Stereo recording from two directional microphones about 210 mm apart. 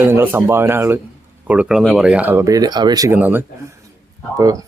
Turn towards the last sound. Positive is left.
turn(degrees=-15)  # may be behind; listen again after turning